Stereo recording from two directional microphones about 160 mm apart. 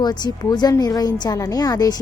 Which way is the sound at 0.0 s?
25° left (ahead or behind).